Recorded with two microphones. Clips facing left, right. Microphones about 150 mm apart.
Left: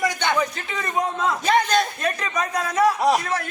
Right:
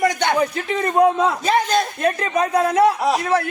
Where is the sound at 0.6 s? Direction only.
60° right (ahead or behind).